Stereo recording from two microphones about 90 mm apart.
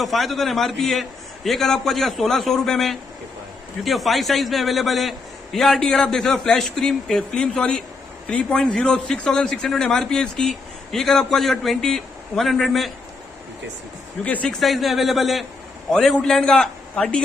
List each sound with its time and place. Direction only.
0.0 s a man's voice: centre (ahead or behind)
14.2 s a man's voice: 15° left (ahead or behind)
14.5 s a man's voice: centre (ahead or behind)